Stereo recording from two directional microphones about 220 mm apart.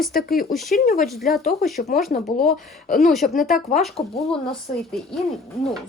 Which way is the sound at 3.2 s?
40° left (ahead or behind).